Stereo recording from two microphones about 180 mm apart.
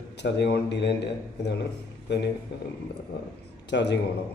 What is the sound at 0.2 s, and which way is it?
A man's voice, 70° left (ahead or behind).